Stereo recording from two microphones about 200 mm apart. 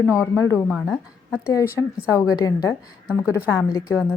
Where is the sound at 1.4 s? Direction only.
10° left (ahead or behind).